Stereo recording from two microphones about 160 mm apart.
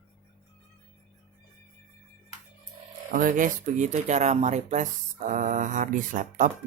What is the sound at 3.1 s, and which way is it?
Speech, 60° right (ahead or behind).